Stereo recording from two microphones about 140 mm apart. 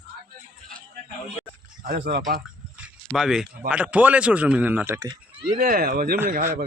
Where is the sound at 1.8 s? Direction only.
90° right.